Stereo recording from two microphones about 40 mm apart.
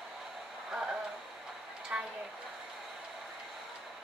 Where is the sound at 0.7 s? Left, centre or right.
Right.